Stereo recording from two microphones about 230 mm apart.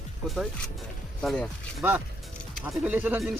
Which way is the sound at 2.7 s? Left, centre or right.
Centre.